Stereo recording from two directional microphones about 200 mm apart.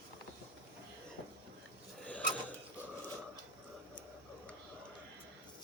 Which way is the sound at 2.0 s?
5° left (ahead or behind).